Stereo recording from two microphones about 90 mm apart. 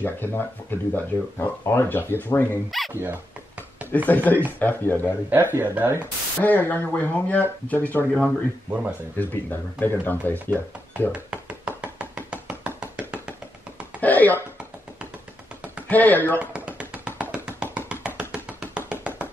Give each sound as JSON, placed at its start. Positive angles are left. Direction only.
{"t": 0.0, "sound": "speech", "side_deg": 20}
{"t": 2.9, "sound": "speech", "side_deg": -25}
{"t": 4.1, "sound": "speech", "side_deg": 20}
{"t": 5.0, "sound": "speech", "side_deg": -20}
{"t": 5.9, "sound": "speech", "side_deg": 20}
{"t": 11.1, "sound": "knock", "side_deg": -15}
{"t": 14.0, "sound": "a sound", "side_deg": 20}
{"t": 15.9, "sound": "speech", "side_deg": 20}
{"t": 16.3, "sound": "tap", "side_deg": -15}
{"t": 18.3, "sound": "music", "side_deg": -15}